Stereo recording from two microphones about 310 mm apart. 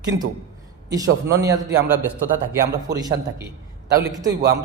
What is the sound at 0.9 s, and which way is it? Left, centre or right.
Speech, centre.